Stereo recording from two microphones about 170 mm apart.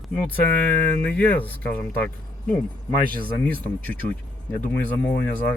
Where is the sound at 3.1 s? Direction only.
60° right (ahead or behind).